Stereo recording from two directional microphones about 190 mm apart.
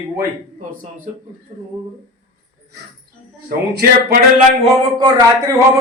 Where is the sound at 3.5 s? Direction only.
55° right (ahead or behind).